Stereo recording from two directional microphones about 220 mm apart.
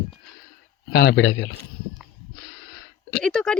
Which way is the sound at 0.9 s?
50° left (ahead or behind).